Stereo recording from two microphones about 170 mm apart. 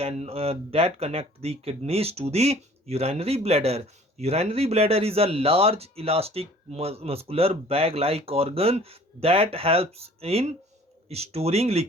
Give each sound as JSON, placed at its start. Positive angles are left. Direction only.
{"t": 0.0, "sound": "speech", "side_deg": -35}